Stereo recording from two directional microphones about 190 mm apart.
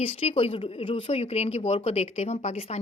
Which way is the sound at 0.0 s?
30° left (ahead or behind).